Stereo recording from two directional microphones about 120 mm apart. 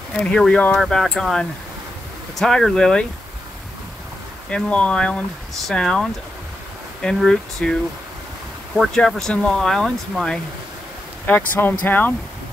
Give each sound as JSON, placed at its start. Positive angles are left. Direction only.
{"t": 0.2, "sound": "speech", "side_deg": 10}
{"t": 4.5, "sound": "speech", "side_deg": 10}
{"t": 8.7, "sound": "speech", "side_deg": 0}
{"t": 11.2, "sound": "speech", "side_deg": 15}